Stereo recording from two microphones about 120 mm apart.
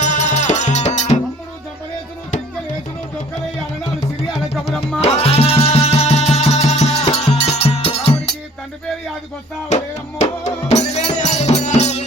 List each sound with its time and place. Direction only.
0.0 s music: 75° left (ahead or behind)
4.9 s music: 55° left (ahead or behind)
9.6 s music: 75° left (ahead or behind)